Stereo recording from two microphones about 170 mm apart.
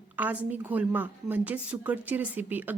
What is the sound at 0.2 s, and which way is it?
A woman's voice, 10° right (ahead or behind).